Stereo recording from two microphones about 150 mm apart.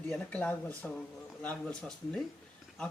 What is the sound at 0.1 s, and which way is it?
Speech, 10° left (ahead or behind).